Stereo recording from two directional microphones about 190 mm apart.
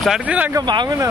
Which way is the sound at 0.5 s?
20° right (ahead or behind).